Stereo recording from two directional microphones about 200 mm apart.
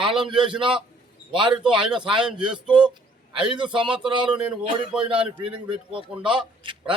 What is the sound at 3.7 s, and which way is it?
Speech, 25° right (ahead or behind).